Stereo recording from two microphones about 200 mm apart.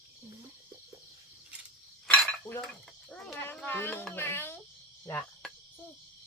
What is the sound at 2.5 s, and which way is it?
Cutlery, 15° left (ahead or behind).